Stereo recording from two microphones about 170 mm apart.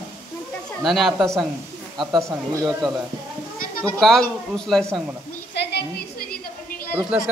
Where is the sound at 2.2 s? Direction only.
15° right (ahead or behind).